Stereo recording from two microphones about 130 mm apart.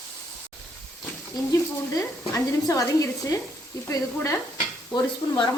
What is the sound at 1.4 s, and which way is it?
Speech, 30° left (ahead or behind).